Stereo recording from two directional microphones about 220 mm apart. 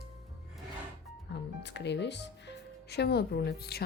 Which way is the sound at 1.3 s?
50° left (ahead or behind).